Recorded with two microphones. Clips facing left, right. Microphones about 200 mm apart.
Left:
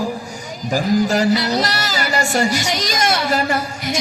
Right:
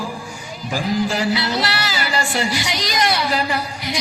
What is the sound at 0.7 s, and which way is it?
Speech, 40° left (ahead or behind).